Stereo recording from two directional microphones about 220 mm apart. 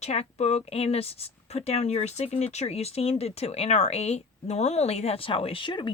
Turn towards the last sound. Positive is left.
turn(degrees=20)  # may be behind; listen again after turning